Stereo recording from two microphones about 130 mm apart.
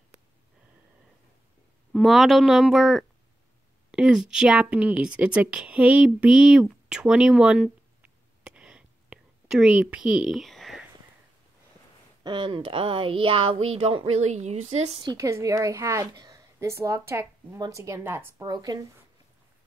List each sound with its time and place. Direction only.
1.9 s a woman's voice: centre (ahead or behind)
12.2 s speech: 35° right (ahead or behind); by 15.0 s 60° right (ahead or behind)
15.0 s a woman's voice: 30° right (ahead or behind)